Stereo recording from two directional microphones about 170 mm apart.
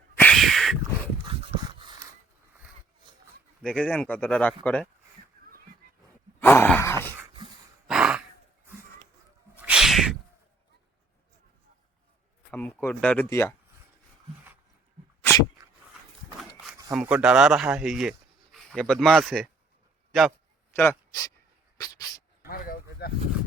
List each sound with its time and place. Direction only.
0.2 s a sound: 5° left (ahead or behind)
1.3 s dog: 30° right (ahead or behind)
3.6 s speech: 5° left (ahead or behind)
6.4 s groan: 10° left (ahead or behind)
7.9 s sigh: 5° right (ahead or behind)
9.6 s cat: 5° right (ahead or behind)
12.5 s speech: 10° left (ahead or behind)
15.2 s dog: 15° left (ahead or behind)
16.9 s speech: 5° right (ahead or behind)
20.7 s speech: 20° left (ahead or behind)
21.8 s dog: 20° left (ahead or behind)
22.4 s a sound: 55° left (ahead or behind)